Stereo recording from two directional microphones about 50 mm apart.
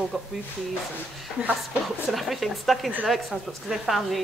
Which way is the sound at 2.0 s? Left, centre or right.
Centre.